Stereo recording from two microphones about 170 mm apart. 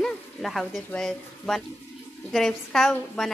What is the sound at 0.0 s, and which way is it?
Speech, centre (ahead or behind).